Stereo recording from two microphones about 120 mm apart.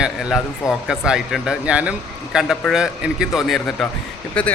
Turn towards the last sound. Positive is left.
turn(degrees=10)  # may be behind; listen again after turning